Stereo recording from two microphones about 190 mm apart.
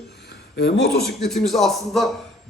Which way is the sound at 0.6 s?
60° left (ahead or behind).